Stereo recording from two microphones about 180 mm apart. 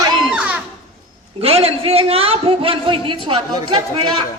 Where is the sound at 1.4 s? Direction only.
35° right (ahead or behind).